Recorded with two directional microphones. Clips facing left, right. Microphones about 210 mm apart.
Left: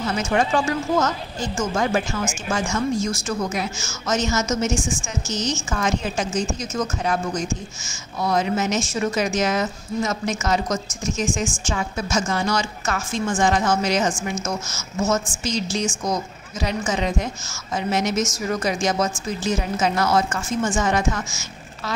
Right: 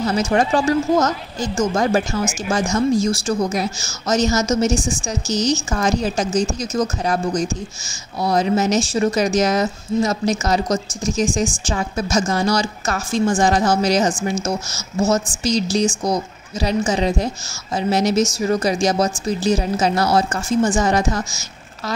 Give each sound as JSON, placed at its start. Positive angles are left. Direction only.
{"t": 0.0, "sound": "a woman's voice", "side_deg": -35}